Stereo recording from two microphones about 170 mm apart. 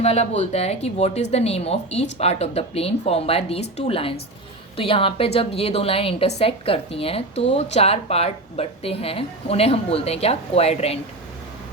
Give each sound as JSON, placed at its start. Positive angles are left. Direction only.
{"t": 0.0, "sound": "speech", "side_deg": 40}